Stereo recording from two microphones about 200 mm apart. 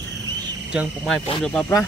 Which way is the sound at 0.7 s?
Centre (ahead or behind).